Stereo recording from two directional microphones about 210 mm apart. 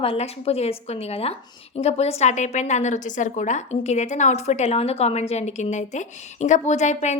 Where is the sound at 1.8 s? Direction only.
30° left (ahead or behind).